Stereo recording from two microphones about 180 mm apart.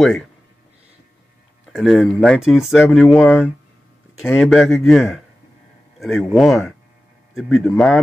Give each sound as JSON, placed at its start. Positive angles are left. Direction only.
{"t": 1.7, "sound": "speech", "side_deg": 0}
{"t": 4.4, "sound": "speech", "side_deg": 0}